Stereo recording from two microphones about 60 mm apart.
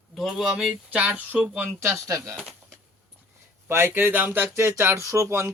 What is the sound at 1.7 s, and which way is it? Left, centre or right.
Speech, right.